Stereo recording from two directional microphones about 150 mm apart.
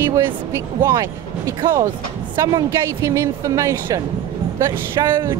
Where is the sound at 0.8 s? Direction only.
20° right (ahead or behind).